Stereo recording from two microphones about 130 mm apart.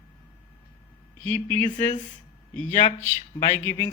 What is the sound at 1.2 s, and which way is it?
Speech, 15° left (ahead or behind).